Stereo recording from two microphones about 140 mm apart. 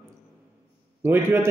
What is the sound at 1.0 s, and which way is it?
Speech, 15° right (ahead or behind).